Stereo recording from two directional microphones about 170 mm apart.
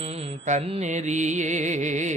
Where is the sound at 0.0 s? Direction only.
35° right (ahead or behind).